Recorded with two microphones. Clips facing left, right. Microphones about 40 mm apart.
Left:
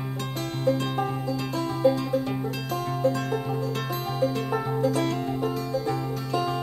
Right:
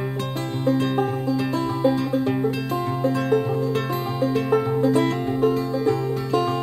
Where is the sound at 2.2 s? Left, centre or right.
Right.